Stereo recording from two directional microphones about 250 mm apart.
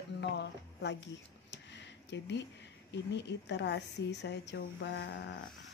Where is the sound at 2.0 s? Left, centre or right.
Left.